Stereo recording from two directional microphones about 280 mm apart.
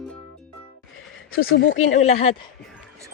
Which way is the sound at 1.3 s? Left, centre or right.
Left.